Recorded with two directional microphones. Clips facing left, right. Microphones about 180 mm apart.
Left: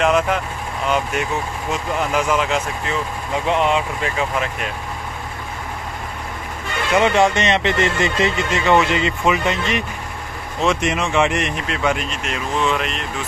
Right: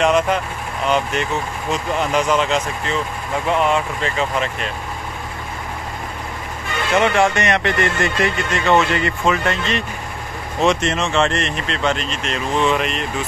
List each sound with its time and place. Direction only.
0.0 s speech: centre (ahead or behind)
3.4 s speech: 20° left (ahead or behind)
4.2 s speech: 5° left (ahead or behind)
7.0 s speech: 20° left (ahead or behind); by 13.0 s centre (ahead or behind)